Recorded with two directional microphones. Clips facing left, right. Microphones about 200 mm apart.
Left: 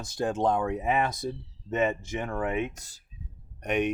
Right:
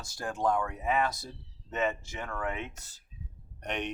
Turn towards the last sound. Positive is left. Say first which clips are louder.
# left 8 dB
turn(degrees=10)  # may be behind; listen again after turning